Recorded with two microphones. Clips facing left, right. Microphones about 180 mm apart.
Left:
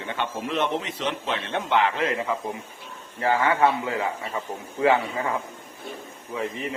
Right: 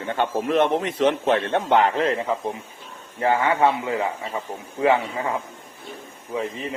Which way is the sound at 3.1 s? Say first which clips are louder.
Right 2 dB; 20° right (ahead or behind).